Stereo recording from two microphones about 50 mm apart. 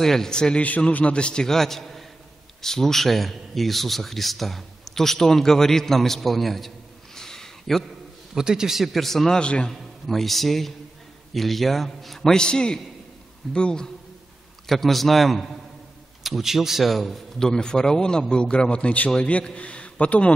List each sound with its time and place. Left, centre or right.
0.0 s a man's voice: centre
0.6 s a man's voice: left; by 6.7 s centre
7.2 s a sound: centre
8.4 s a man's voice: centre
9.4 s a man's voice: left
9.7 s a man's voice: centre
12.4 s a man's voice: centre
14.7 s a man's voice: centre
17.4 s a man's voice: centre